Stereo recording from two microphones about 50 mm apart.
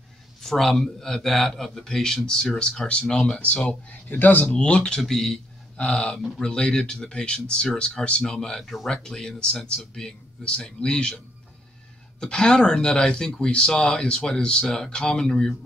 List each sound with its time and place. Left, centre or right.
0.4 s speech: centre
3.6 s speech: left; by 5.0 s centre
5.0 s speech: centre
12.2 s speech: centre